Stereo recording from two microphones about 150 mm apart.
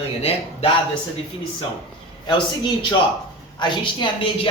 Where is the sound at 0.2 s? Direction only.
40° left (ahead or behind).